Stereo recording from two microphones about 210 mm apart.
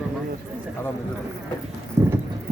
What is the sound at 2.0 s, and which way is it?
Clip-clop, 15° right (ahead or behind).